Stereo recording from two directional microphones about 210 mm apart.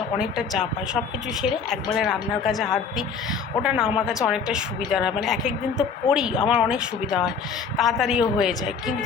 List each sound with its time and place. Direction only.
0.2 s a woman's voice: centre (ahead or behind)
3.8 s a woman's voice: 25° left (ahead or behind)
4.1 s a woman's voice: 5° right (ahead or behind)